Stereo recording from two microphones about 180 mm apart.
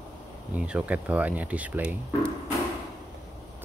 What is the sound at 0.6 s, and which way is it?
Speech, 5° right (ahead or behind).